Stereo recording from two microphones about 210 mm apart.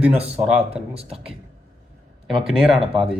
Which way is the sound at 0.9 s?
30° right (ahead or behind).